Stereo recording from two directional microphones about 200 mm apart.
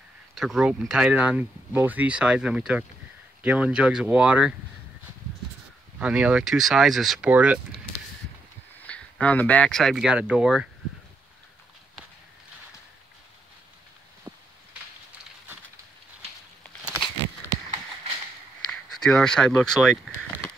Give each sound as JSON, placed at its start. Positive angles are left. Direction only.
{"t": 0.3, "sound": "speech", "side_deg": 0}
{"t": 5.9, "sound": "speech", "side_deg": -5}
{"t": 8.8, "sound": "speech", "side_deg": 5}
{"t": 16.6, "sound": "a sound", "side_deg": 5}
{"t": 19.0, "sound": "speech", "side_deg": 5}